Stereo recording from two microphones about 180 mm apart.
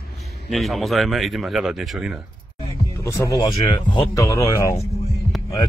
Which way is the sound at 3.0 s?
15° left (ahead or behind).